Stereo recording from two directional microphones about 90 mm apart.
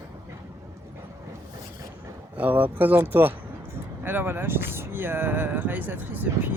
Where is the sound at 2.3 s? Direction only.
20° right (ahead or behind).